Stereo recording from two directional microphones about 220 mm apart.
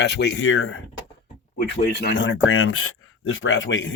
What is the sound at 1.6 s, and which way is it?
Speech, 45° left (ahead or behind).